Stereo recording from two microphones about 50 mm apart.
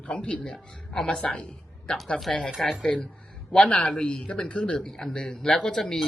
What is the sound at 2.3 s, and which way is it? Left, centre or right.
Speech, centre.